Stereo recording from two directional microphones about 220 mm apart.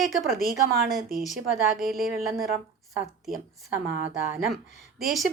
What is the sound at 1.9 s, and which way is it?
Speech, 40° right (ahead or behind).